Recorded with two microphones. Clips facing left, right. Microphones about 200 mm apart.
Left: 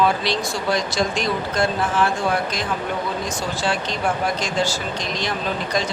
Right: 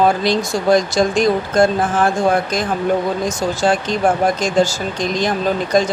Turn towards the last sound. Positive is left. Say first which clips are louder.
# right 8 dB
turn(degrees=-45)  # may be behind; listen again after turning